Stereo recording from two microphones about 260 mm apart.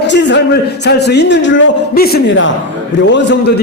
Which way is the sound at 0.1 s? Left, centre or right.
Left.